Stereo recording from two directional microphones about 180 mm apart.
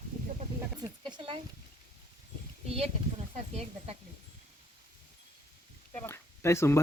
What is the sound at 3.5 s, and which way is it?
Speech, 35° right (ahead or behind).